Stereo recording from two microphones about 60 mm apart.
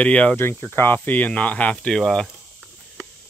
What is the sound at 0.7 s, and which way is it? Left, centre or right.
Speech, left.